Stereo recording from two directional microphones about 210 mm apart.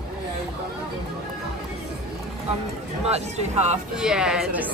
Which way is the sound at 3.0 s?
30° right (ahead or behind).